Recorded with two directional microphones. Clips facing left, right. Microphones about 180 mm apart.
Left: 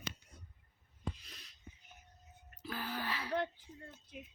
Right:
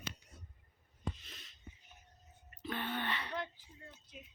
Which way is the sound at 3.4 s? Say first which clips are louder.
Left 5 dB; 55° left (ahead or behind).